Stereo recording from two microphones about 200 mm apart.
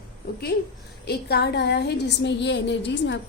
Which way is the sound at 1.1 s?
55° left (ahead or behind).